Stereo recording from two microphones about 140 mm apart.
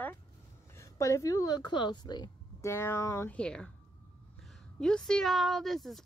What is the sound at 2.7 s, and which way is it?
A woman's voice, 15° left (ahead or behind).